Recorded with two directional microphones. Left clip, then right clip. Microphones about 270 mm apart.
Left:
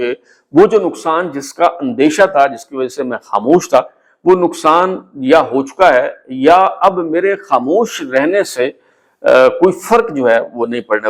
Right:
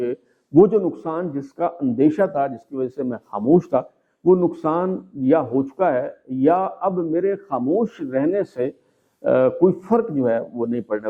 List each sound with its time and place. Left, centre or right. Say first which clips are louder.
0.7 s speech: left 9 dB; centre